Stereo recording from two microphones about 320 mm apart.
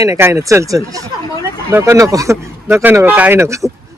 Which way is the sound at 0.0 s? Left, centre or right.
Centre.